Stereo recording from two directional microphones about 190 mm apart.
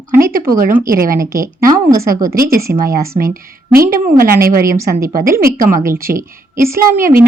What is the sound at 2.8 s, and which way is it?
Speech, 50° right (ahead or behind).